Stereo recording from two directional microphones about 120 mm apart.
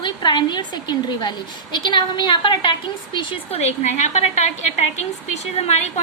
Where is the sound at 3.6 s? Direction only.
65° left (ahead or behind).